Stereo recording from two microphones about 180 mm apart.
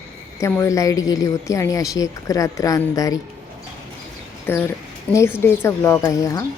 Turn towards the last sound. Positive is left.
turn(degrees=20)  # may be behind; listen again after turning